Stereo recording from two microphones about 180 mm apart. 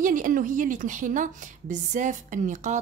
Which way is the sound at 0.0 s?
50° right (ahead or behind).